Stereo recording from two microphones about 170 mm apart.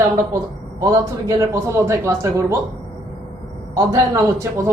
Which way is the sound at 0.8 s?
20° right (ahead or behind).